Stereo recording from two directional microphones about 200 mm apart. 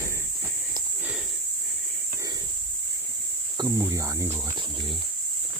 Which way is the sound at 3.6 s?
15° right (ahead or behind).